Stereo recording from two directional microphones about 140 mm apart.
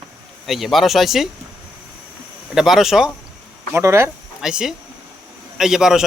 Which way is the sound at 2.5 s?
5° right (ahead or behind).